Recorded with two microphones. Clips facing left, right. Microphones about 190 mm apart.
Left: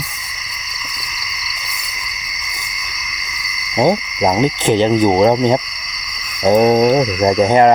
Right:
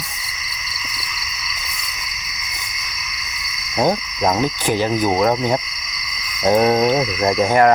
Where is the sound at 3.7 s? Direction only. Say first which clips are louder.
Left 4 dB; 10° left (ahead or behind).